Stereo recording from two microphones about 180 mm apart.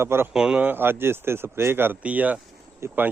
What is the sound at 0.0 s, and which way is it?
Speech, 15° right (ahead or behind).